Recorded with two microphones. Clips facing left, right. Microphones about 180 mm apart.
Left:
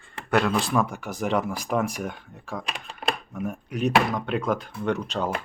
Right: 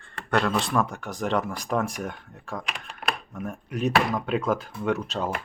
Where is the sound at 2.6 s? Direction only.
30° left (ahead or behind).